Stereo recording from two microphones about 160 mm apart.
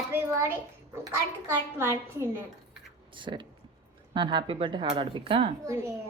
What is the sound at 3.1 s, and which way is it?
A child's voice, 30° right (ahead or behind).